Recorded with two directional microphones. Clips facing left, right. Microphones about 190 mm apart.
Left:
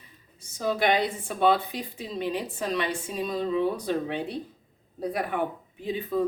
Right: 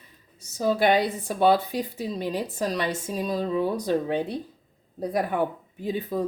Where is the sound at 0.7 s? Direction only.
35° right (ahead or behind).